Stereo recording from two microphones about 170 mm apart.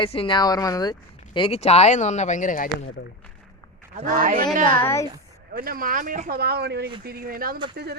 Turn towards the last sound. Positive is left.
turn(degrees=-70)  # may be behind; listen again after turning